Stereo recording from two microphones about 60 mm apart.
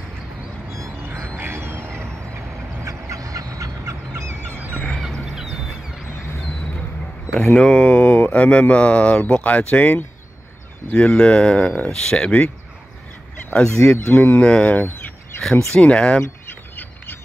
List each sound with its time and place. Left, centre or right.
1.0 s a sound: right
2.3 s fowl: right
4.2 s fowl: right
5.2 s a sound: centre
7.5 s speech: centre
13.5 s speech: centre
13.9 s speech: left
14.4 s speech: left
15.7 s speech: centre
16.2 s bird: left